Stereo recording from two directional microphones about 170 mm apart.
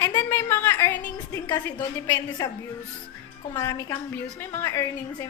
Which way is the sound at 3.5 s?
15° left (ahead or behind).